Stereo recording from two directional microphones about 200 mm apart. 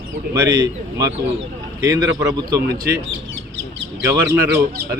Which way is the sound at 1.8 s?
15° right (ahead or behind).